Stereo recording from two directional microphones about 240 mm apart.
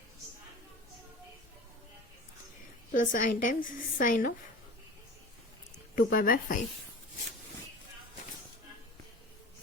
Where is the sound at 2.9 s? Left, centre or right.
Left.